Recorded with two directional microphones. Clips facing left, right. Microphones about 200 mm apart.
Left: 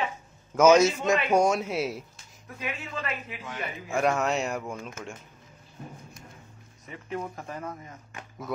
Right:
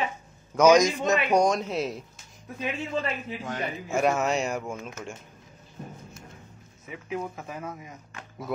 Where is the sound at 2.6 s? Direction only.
30° right (ahead or behind).